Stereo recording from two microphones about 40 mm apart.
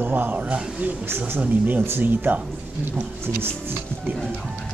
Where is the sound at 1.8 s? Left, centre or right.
Right.